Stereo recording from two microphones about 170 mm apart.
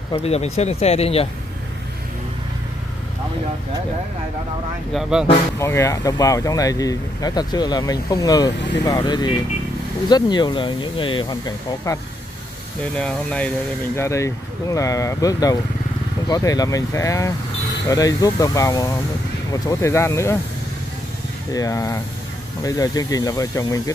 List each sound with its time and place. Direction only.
0.1 s speech: 35° left (ahead or behind)
5.6 s speech: 15° left (ahead or behind)
12.9 s speech: 5° left (ahead or behind)
13.9 s speech: 15° left (ahead or behind)
21.5 s speech: 20° left (ahead or behind)